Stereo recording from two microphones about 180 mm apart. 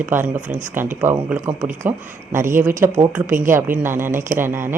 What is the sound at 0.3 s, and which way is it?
Speech, 45° right (ahead or behind).